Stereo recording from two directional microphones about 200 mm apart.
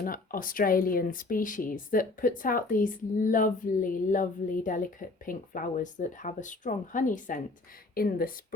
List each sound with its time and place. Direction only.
0.0 s speech: 45° left (ahead or behind)